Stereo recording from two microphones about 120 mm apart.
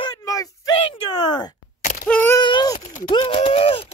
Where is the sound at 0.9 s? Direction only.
40° left (ahead or behind).